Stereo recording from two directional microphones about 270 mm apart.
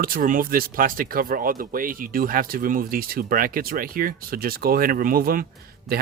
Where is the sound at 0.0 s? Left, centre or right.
Right.